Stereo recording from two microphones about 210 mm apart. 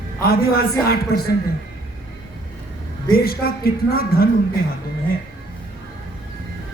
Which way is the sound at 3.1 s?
45° left (ahead or behind).